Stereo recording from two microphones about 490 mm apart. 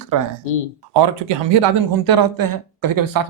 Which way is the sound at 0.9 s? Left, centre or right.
Right.